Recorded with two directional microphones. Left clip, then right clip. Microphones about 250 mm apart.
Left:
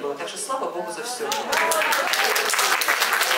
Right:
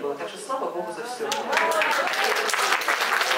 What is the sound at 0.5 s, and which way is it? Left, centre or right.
Speech, centre.